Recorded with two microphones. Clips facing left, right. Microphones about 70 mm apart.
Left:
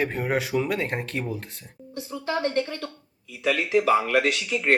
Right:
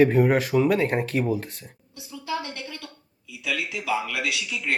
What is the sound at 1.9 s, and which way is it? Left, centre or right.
Speech, left.